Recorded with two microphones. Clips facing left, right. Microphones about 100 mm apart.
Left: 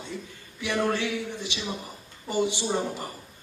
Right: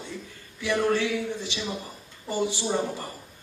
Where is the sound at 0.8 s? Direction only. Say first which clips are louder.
Right 2 dB; 15° left (ahead or behind).